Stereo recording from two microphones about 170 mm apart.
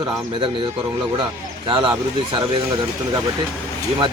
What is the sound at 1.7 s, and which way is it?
Speech, 30° right (ahead or behind).